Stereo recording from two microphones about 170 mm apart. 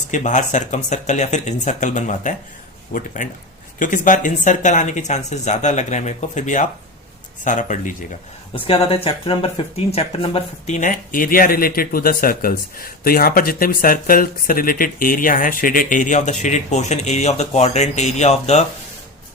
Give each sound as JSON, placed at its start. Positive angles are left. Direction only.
{"t": 0.1, "sound": "speech", "side_deg": 45}
{"t": 8.5, "sound": "speech", "side_deg": 35}